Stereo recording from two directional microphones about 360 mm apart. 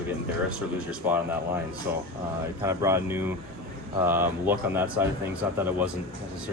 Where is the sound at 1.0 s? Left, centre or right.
Centre.